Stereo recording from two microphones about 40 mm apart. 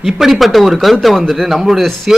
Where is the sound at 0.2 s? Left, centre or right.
Centre.